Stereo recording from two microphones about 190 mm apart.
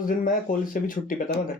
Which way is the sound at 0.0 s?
45° left (ahead or behind).